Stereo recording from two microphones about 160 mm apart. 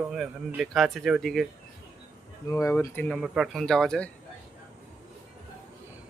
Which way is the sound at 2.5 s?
20° left (ahead or behind).